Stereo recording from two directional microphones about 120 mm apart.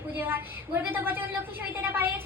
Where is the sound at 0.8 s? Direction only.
15° right (ahead or behind).